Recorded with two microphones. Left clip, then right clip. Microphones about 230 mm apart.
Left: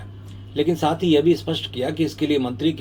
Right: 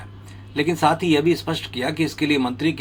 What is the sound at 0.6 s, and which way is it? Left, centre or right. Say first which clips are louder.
Speech: right 2 dB; right.